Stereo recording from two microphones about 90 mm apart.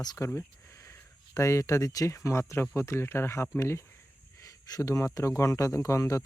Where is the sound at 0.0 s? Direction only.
45° left (ahead or behind).